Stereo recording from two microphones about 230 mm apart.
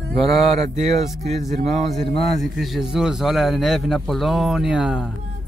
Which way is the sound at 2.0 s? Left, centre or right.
Left.